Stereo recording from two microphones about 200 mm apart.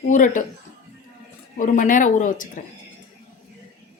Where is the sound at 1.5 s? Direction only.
40° left (ahead or behind).